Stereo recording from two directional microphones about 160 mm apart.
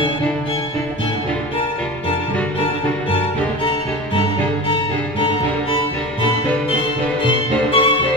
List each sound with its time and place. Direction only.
7.2 s violin: 30° left (ahead or behind)